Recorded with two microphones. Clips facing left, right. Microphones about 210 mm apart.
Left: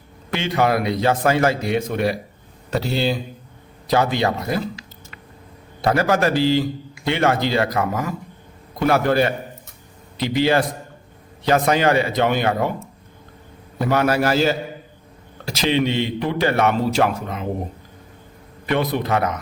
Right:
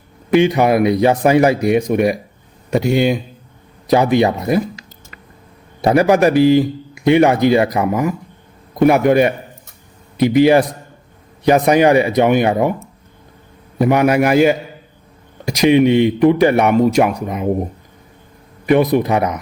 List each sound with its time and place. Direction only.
0.3 s a man's voice: 15° right (ahead or behind)
5.8 s a man's voice: 20° right (ahead or behind)
13.7 s a man's voice: 15° right (ahead or behind)
18.6 s a man's voice: 15° right (ahead or behind)